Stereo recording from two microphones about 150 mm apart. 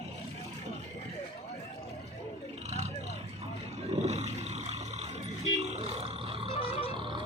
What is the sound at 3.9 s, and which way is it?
Roar, 45° right (ahead or behind).